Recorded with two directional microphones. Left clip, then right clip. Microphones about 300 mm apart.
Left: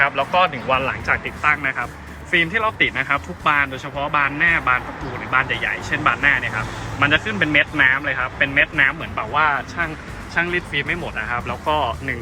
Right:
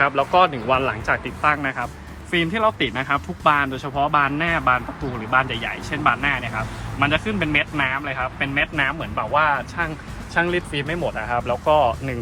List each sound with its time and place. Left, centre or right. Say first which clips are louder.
0.0 s speech: even; centre